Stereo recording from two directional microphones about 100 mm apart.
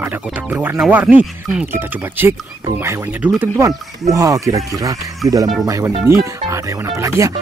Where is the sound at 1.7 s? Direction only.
25° right (ahead or behind).